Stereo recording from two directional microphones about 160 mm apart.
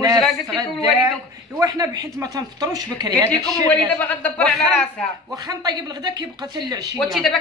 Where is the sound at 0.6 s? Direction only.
25° right (ahead or behind).